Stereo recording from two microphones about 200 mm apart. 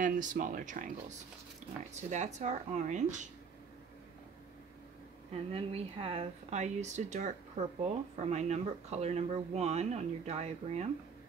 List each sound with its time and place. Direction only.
0.0 s speech: 40° right (ahead or behind)
2.0 s speech: 35° right (ahead or behind)
5.3 s speech: 30° right (ahead or behind)